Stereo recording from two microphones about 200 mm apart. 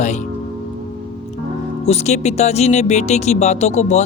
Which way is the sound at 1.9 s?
35° left (ahead or behind).